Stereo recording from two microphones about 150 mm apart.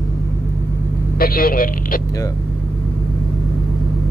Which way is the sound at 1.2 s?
75° left (ahead or behind).